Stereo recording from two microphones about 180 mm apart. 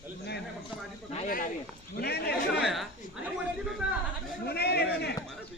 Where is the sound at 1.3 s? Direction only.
50° left (ahead or behind).